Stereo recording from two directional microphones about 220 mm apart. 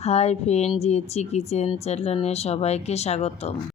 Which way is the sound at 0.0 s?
30° left (ahead or behind).